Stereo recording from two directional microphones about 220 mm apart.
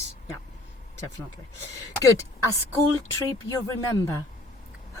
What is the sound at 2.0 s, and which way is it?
Speech, 15° left (ahead or behind).